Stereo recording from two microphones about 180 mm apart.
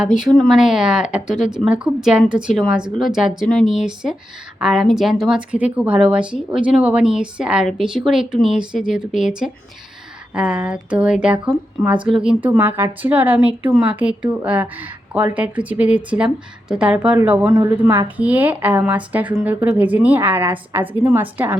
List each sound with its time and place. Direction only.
0.0 s a woman's voice: 5° right (ahead or behind)